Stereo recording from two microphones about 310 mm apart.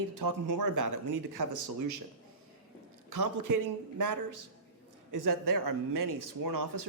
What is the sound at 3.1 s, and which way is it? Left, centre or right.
Speech, right.